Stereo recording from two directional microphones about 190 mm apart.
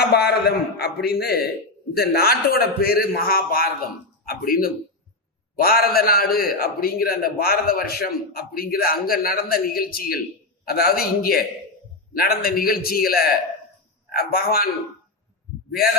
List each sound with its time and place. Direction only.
0.1 s a man's voice: 55° left (ahead or behind)